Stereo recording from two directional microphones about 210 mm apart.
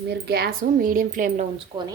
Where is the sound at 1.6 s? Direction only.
20° right (ahead or behind).